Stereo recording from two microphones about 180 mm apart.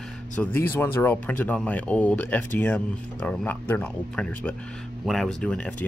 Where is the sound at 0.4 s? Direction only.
10° left (ahead or behind).